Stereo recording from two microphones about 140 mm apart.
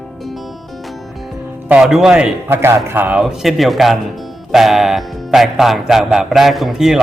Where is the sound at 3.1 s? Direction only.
5° right (ahead or behind).